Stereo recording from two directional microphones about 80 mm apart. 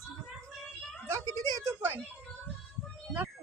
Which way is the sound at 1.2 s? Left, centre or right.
Right.